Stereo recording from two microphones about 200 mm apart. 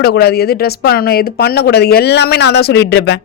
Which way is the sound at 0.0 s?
55° left (ahead or behind).